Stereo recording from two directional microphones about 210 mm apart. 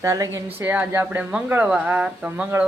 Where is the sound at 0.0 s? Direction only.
15° right (ahead or behind).